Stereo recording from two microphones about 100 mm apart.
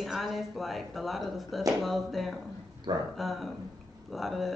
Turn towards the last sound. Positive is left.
turn(degrees=0)  # may be behind; listen again after turning